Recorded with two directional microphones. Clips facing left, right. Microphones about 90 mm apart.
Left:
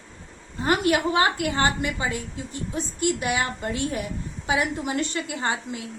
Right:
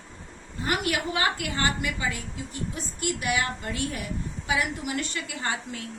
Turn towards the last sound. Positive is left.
turn(degrees=20)  # may be behind; listen again after turning